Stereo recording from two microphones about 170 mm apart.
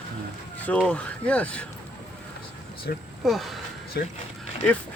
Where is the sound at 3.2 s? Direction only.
Centre (ahead or behind).